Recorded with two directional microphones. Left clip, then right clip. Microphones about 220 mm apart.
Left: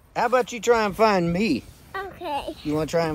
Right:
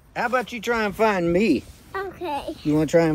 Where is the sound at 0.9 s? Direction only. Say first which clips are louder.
Even; 30° left (ahead or behind).